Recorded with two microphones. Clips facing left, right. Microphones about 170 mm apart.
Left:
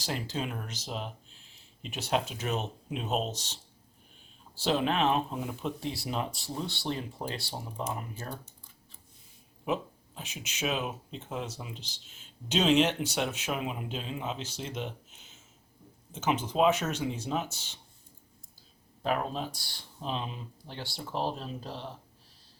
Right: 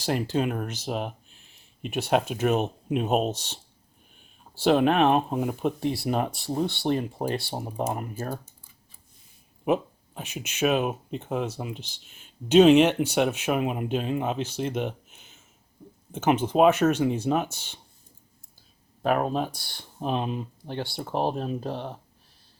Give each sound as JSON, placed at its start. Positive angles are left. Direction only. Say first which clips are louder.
{"t": 0.0, "sound": "speech", "louder": "right 9 dB", "side_deg": -55}
{"t": 9.6, "sound": "speech", "louder": "right 7 dB", "side_deg": -55}
{"t": 19.0, "sound": "speech", "louder": "right 7 dB", "side_deg": -55}